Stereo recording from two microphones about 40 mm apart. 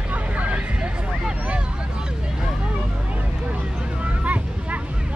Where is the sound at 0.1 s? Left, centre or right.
Right.